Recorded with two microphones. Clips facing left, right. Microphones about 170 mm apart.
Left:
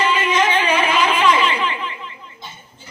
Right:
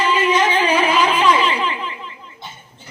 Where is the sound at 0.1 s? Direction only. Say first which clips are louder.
Right 1 dB; 35° right (ahead or behind).